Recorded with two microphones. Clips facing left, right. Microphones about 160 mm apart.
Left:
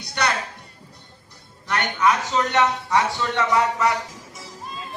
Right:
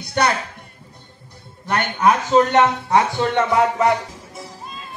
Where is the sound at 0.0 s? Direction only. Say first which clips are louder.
Right 6 dB; 55° right (ahead or behind).